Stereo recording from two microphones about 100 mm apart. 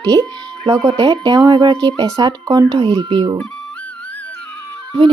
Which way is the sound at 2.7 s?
55° right (ahead or behind).